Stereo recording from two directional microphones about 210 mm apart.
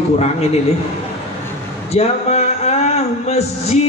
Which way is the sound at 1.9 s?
30° left (ahead or behind).